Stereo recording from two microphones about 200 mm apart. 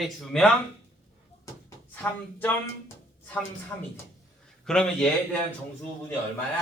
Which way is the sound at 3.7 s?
10° left (ahead or behind).